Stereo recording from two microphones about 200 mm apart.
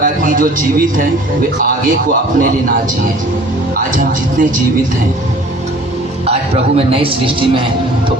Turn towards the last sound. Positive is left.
turn(degrees=-25)  # may be behind; listen again after turning